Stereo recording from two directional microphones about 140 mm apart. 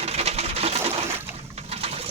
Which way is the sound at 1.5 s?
45° right (ahead or behind).